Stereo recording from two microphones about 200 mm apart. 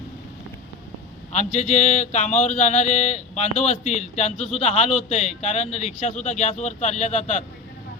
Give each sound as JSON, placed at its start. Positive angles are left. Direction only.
{"t": 1.5, "sound": "speech", "side_deg": 35}